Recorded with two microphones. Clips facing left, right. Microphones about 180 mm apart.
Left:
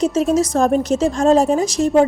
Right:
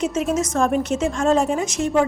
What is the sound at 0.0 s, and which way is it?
A woman's voice, 35° left (ahead or behind).